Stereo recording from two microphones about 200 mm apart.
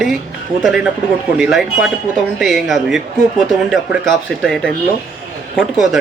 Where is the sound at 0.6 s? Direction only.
Centre (ahead or behind).